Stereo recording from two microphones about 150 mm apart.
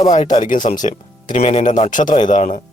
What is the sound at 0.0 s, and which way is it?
Speech, 55° left (ahead or behind).